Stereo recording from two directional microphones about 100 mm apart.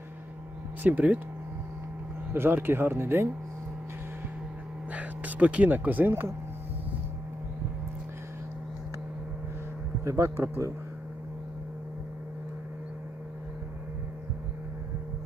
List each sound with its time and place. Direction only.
0.8 s speech: 15° right (ahead or behind)
2.3 s speech: 20° right (ahead or behind)
4.9 s speech: 15° right (ahead or behind)
10.0 s speech: 30° right (ahead or behind)